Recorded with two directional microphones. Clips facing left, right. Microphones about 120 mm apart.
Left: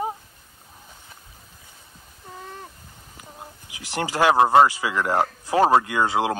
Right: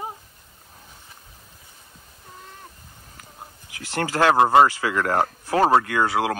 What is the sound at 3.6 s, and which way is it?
Speech, 15° left (ahead or behind).